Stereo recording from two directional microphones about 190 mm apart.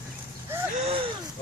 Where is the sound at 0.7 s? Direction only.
30° right (ahead or behind).